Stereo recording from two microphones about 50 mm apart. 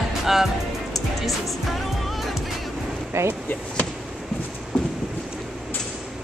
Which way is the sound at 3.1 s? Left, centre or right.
Right.